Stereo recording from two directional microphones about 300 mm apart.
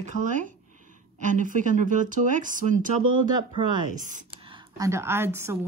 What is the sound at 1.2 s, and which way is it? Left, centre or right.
A woman's voice, right.